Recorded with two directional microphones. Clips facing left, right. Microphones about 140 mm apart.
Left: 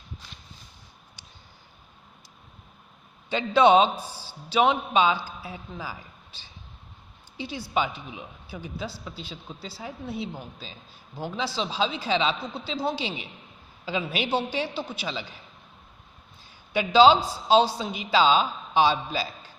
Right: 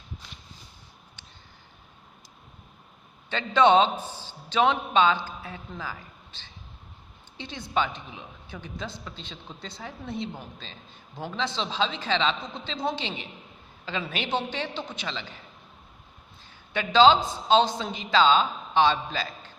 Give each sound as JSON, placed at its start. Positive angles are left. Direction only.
{"t": 3.2, "sound": "a woman's voice", "side_deg": 10}
{"t": 16.7, "sound": "a woman's voice", "side_deg": 10}